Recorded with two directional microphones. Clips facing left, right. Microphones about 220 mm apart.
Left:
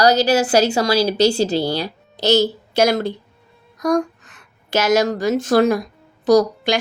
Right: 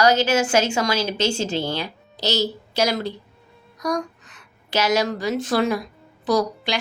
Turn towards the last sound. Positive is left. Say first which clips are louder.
# left 7 dB
turn(degrees=45)  # may be behind; listen again after turning